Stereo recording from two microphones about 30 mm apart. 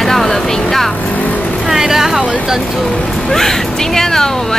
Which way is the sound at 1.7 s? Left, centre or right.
Centre.